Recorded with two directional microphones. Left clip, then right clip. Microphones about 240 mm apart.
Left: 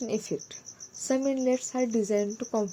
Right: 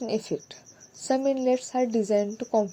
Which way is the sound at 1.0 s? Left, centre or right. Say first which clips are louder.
Right 3 dB; centre.